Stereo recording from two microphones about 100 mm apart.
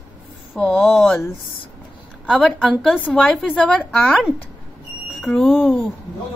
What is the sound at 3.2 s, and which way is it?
A woman's voice, centre (ahead or behind).